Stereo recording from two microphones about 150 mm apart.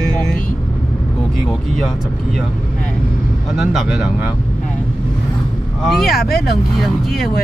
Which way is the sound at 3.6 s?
5° right (ahead or behind).